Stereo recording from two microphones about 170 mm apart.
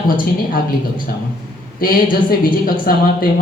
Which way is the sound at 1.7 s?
55° left (ahead or behind).